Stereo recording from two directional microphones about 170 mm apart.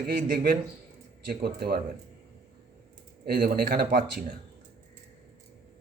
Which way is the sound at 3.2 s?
60° right (ahead or behind).